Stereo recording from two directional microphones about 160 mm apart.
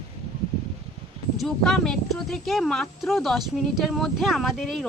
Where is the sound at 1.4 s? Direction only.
Centre (ahead or behind).